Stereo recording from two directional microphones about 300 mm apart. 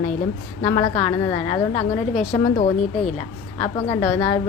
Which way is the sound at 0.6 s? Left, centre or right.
Centre.